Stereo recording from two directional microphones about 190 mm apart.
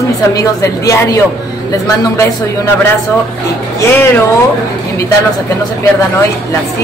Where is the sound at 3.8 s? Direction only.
10° left (ahead or behind).